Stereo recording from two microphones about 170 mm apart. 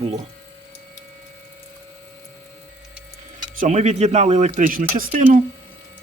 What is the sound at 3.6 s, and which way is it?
Speech, 45° right (ahead or behind).